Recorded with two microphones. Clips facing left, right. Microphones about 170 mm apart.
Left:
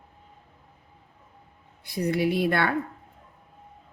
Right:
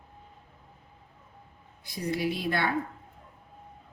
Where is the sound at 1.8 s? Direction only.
60° left (ahead or behind).